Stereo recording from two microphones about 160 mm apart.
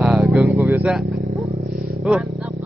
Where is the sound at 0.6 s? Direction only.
10° right (ahead or behind).